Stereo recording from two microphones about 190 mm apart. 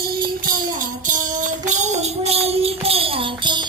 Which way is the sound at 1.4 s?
40° right (ahead or behind).